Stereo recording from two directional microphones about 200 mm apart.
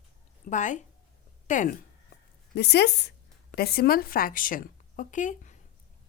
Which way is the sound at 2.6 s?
55° left (ahead or behind).